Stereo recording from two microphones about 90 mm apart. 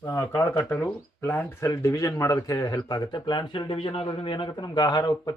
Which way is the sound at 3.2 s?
65° left (ahead or behind).